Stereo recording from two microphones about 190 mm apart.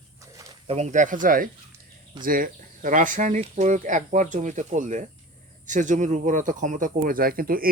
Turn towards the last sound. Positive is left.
turn(degrees=-50)  # may be behind; listen again after turning